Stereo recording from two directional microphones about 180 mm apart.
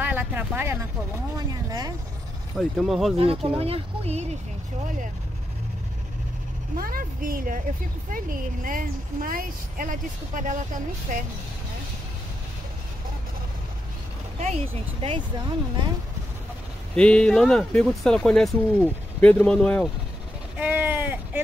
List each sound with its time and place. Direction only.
0.0 s speech: 10° right (ahead or behind)
2.5 s speech: centre (ahead or behind)
3.2 s speech: 35° right (ahead or behind)
6.8 s a woman's voice: 50° right (ahead or behind)
14.4 s speech: 35° right (ahead or behind)
16.9 s speech: 5° left (ahead or behind)
20.5 s a sound: 10° right (ahead or behind)